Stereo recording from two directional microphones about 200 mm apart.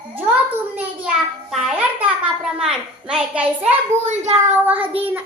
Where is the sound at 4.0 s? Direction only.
35° right (ahead or behind).